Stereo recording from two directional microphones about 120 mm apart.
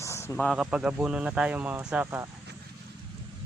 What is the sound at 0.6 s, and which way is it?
Speech, 10° right (ahead or behind).